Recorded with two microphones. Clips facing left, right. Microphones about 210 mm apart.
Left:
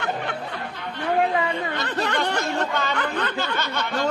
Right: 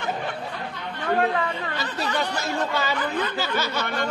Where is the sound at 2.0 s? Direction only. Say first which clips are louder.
Left 1 dB; 65° left (ahead or behind).